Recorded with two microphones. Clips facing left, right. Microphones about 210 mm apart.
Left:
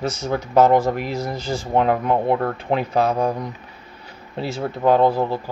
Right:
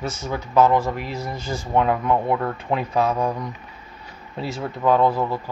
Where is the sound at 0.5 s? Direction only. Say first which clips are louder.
Left 2 dB; 45° left (ahead or behind).